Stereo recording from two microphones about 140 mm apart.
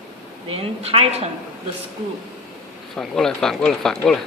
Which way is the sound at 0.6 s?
45° right (ahead or behind).